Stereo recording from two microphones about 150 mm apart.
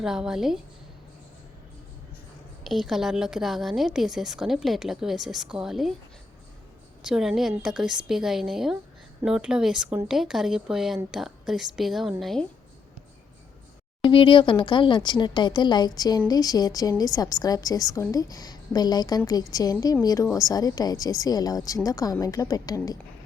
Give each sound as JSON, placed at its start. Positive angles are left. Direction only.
{"t": 0.0, "sound": "a woman's voice", "side_deg": -5}
{"t": 2.6, "sound": "a woman's voice", "side_deg": 0}
{"t": 7.0, "sound": "a woman's voice", "side_deg": -5}
{"t": 14.0, "sound": "a woman's voice", "side_deg": 35}